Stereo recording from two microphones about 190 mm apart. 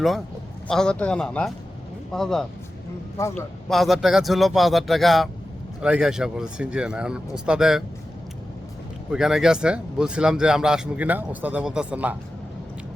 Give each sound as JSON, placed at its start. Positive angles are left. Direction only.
{"t": 0.7, "sound": "speech", "side_deg": 5}
{"t": 3.2, "sound": "a man's voice", "side_deg": 15}
{"t": 3.7, "sound": "speech", "side_deg": 0}
{"t": 9.1, "sound": "speech", "side_deg": -5}